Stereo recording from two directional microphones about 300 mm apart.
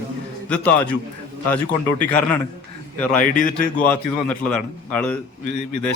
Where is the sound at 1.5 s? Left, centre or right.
Centre.